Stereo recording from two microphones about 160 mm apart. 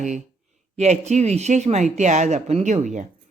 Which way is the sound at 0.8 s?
45° right (ahead or behind).